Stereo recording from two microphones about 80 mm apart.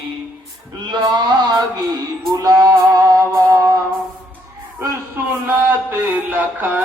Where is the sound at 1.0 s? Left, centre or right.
Right.